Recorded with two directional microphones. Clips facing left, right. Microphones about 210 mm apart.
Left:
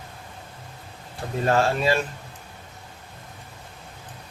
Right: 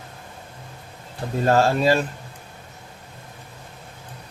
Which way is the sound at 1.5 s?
40° right (ahead or behind).